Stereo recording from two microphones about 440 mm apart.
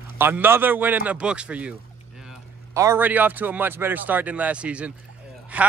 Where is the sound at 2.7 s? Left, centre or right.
Centre.